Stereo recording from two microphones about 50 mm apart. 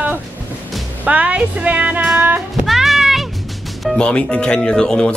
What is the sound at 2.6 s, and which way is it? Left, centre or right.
Music, centre.